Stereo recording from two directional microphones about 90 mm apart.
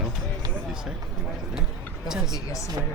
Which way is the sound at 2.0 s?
5° right (ahead or behind).